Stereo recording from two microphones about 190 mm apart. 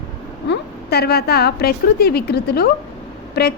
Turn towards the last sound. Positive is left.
turn(degrees=60)  # may be behind; listen again after turning